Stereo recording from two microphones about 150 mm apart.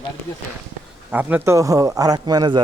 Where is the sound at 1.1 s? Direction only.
10° right (ahead or behind); by 2.6 s 25° right (ahead or behind).